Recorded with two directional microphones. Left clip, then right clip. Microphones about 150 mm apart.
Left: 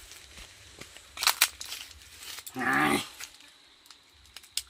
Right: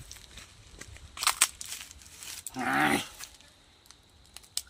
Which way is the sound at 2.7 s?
5° right (ahead or behind).